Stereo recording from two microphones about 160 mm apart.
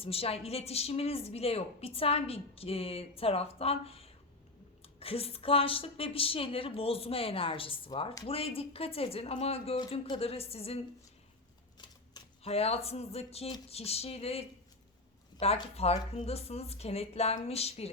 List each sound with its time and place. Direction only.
0.0 s a woman's voice: 40° left (ahead or behind)
11.8 s typewriter: 30° left (ahead or behind)
12.4 s a woman's voice: 40° left (ahead or behind)